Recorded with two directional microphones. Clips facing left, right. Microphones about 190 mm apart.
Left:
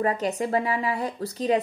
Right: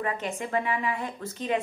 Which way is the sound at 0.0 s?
40° left (ahead or behind).